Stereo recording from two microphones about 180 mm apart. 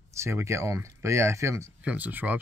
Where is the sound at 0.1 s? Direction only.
15° right (ahead or behind).